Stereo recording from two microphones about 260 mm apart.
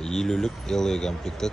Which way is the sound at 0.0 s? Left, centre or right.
Centre.